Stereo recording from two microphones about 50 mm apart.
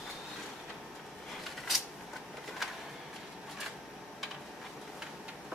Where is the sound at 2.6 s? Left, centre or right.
Centre.